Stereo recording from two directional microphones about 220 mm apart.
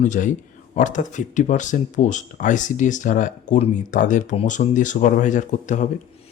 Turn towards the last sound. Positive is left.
turn(degrees=35)  # may be behind; listen again after turning